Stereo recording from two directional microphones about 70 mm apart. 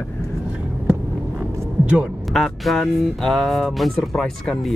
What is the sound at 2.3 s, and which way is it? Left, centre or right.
Speech, centre.